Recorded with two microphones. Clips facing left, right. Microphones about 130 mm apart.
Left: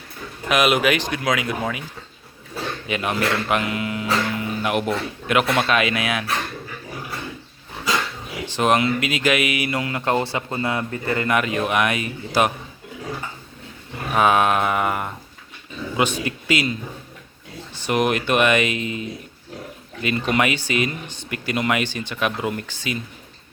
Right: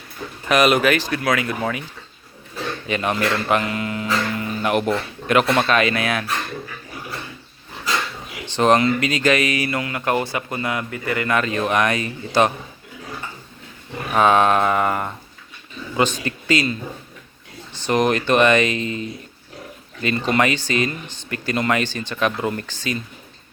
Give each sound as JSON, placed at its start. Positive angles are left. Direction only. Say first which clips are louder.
{"t": 0.4, "sound": "speech", "louder": "right 2 dB", "side_deg": 5}
{"t": 2.8, "sound": "speech", "louder": "right 2 dB", "side_deg": 5}
{"t": 8.4, "sound": "speech", "louder": "right 3 dB", "side_deg": 5}
{"t": 9.7, "sound": "a man's voice", "louder": "even", "side_deg": 25}
{"t": 11.3, "sound": "speech", "louder": "right 1 dB", "side_deg": 15}
{"t": 14.1, "sound": "a man's voice", "louder": "right 2 dB", "side_deg": 10}
{"t": 17.8, "sound": "speech", "louder": "right 2 dB", "side_deg": 5}